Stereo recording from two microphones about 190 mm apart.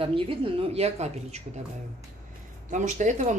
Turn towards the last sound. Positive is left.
turn(degrees=-40)  # may be behind; listen again after turning